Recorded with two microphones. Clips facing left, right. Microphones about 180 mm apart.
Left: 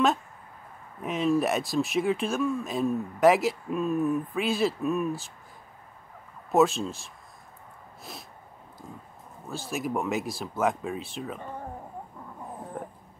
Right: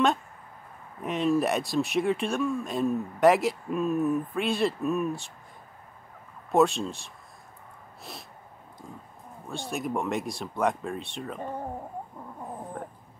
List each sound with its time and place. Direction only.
1.0 s speech: centre (ahead or behind)
6.5 s speech: centre (ahead or behind)
8.0 s sneeze: centre (ahead or behind)
9.5 s speech: centre (ahead or behind)
12.8 s a sound: 5° left (ahead or behind)